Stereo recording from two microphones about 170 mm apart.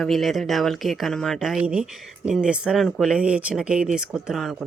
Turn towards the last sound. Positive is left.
turn(degrees=0)  # may be behind; listen again after turning